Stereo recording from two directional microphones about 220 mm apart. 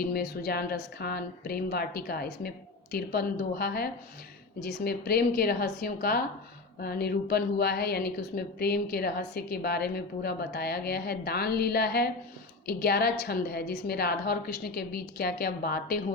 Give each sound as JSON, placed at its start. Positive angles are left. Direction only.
{"t": 0.0, "sound": "a woman's voice", "side_deg": 45}